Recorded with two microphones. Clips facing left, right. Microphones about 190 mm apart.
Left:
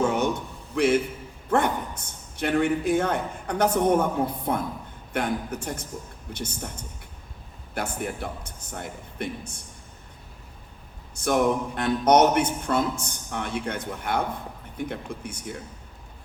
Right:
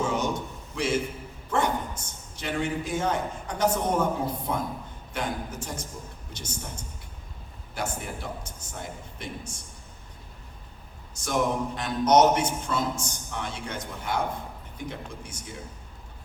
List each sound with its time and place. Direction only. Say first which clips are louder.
0.0 s a sound: left 4 dB; 60° left (ahead or behind)
0.8 s a man's voice: left 6 dB; 55° left (ahead or behind)
7.7 s a man's voice: left 3 dB; 55° left (ahead or behind)
11.1 s a man's voice: left 4 dB; 60° left (ahead or behind)